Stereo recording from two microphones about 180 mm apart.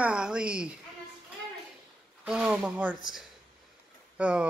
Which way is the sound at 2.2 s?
5° right (ahead or behind).